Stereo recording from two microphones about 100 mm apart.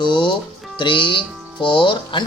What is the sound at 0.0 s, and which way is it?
Speech, 50° left (ahead or behind).